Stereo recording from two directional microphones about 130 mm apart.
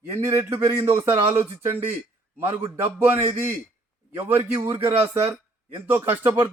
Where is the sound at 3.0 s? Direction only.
15° right (ahead or behind).